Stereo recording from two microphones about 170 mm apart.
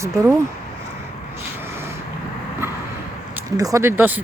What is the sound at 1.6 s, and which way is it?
Vehicle, 15° right (ahead or behind).